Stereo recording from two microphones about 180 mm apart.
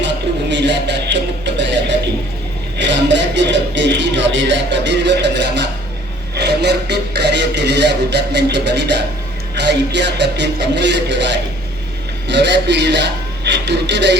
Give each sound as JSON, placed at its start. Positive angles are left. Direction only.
{"t": 0.0, "sound": "music", "side_deg": -75}
{"t": 13.4, "sound": "speech", "side_deg": -70}